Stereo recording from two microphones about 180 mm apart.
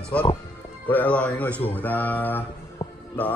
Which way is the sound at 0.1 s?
10° left (ahead or behind).